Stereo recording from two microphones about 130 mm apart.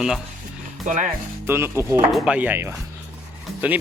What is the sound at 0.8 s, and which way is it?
Speech, 75° right (ahead or behind).